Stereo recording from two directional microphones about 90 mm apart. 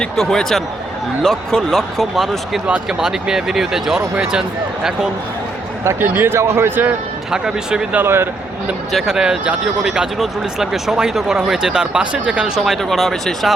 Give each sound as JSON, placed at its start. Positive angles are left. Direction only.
{"t": 0.0, "sound": "speech", "side_deg": 5}
{"t": 5.8, "sound": "speech", "side_deg": -25}
{"t": 7.3, "sound": "speech", "side_deg": -5}
{"t": 7.9, "sound": "speech", "side_deg": -25}
{"t": 8.9, "sound": "speech", "side_deg": -5}